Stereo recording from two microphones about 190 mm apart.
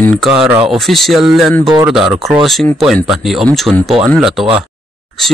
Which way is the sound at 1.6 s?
25° right (ahead or behind).